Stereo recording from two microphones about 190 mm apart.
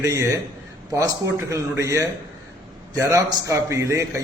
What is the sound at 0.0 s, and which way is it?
A man's voice, 15° right (ahead or behind).